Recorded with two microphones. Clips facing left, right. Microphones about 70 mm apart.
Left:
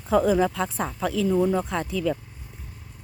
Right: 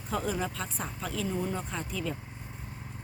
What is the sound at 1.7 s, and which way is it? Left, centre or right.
Speech, left.